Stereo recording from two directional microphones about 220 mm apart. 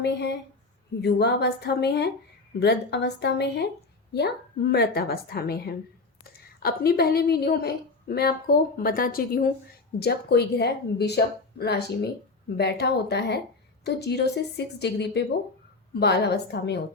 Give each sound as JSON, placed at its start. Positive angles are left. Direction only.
{"t": 0.0, "sound": "a woman's voice", "side_deg": 50}